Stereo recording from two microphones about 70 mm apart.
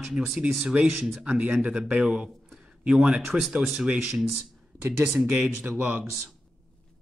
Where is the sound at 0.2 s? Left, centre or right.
Centre.